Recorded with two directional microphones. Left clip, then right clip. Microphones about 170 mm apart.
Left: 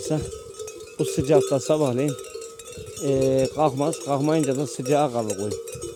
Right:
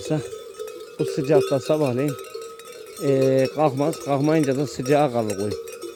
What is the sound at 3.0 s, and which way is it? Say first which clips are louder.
Speech: right 2 dB; 15° right (ahead or behind).